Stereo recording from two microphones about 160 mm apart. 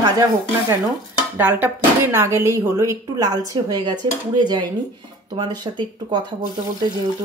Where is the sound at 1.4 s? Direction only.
10° right (ahead or behind); by 6.2 s 25° right (ahead or behind).